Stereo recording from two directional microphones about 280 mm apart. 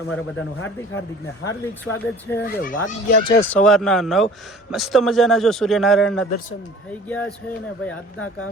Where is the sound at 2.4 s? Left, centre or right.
Left.